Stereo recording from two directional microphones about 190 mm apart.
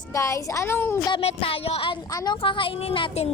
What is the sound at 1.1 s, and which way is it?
A woman's voice, 30° left (ahead or behind).